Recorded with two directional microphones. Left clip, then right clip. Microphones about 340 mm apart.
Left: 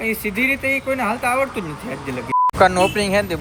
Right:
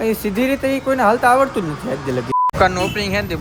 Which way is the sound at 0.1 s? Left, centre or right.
Centre.